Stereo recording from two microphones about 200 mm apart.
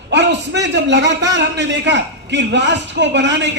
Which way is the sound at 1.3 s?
60° right (ahead or behind).